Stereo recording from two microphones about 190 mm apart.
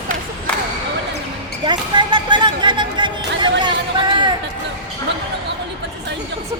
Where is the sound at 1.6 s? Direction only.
25° right (ahead or behind).